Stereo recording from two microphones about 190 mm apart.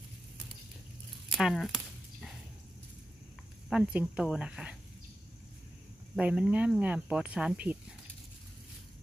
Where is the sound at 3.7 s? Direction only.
5° right (ahead or behind).